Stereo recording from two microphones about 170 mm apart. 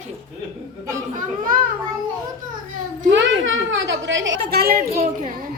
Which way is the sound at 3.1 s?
90° right.